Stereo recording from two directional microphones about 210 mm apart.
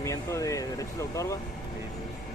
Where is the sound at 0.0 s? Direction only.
15° left (ahead or behind).